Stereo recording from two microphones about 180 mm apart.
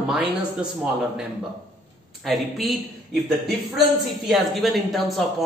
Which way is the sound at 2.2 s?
Centre (ahead or behind).